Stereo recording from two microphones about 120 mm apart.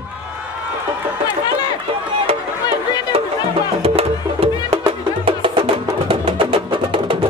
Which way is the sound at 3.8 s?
55° right (ahead or behind).